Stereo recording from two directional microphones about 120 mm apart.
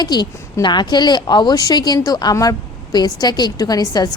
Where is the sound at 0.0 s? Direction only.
35° left (ahead or behind).